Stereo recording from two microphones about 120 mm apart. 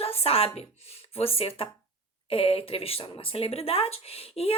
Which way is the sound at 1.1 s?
55° left (ahead or behind).